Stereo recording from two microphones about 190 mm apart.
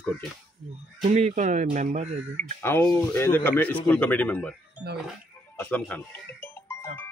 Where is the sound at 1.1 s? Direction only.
40° right (ahead or behind).